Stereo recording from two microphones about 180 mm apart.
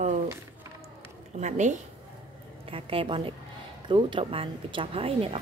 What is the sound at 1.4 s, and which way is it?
Speech, 40° right (ahead or behind).